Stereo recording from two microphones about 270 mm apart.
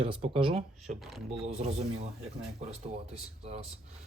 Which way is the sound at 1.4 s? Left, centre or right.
Right.